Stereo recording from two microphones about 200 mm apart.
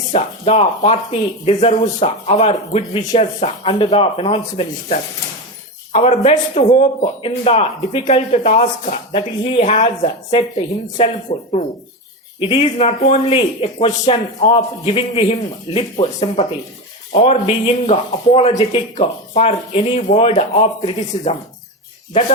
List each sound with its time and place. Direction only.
0.1 s a man's voice: 30° left (ahead or behind)
12.4 s a man's voice: 30° left (ahead or behind)